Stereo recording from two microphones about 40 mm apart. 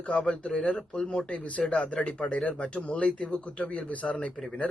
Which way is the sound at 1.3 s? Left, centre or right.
Left.